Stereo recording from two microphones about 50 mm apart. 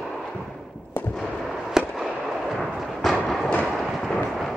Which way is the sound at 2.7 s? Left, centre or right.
Centre.